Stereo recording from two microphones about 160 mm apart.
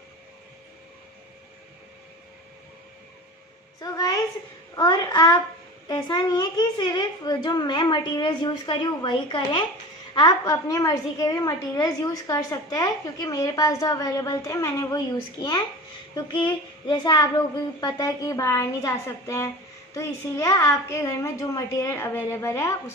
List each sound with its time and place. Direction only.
3.8 s a woman's voice: 25° left (ahead or behind)
16.2 s a woman's voice: 30° left (ahead or behind)